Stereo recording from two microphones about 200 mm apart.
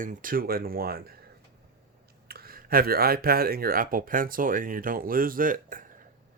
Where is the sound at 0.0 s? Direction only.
40° right (ahead or behind).